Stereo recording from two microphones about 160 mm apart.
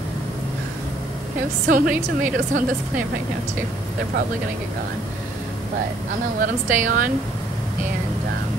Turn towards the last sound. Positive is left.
turn(degrees=-55)  # may be behind; listen again after turning